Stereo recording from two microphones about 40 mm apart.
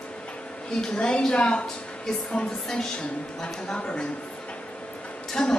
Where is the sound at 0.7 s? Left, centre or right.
Centre.